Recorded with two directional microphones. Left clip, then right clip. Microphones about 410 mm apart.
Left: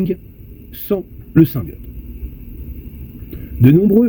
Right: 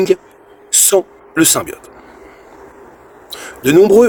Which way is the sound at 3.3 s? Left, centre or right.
Right.